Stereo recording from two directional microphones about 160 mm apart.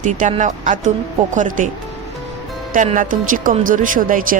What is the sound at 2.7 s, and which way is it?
Speech, 55° right (ahead or behind).